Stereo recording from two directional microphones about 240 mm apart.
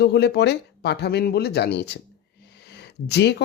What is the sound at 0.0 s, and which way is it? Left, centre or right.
Speech, left.